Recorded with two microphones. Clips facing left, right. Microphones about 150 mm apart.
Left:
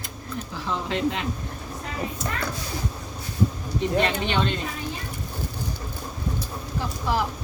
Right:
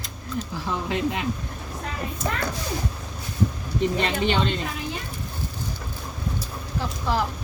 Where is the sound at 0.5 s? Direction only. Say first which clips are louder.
Left 1 dB; 15° right (ahead or behind).